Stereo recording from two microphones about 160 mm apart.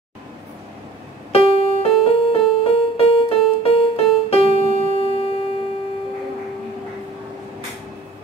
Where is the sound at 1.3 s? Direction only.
35° left (ahead or behind).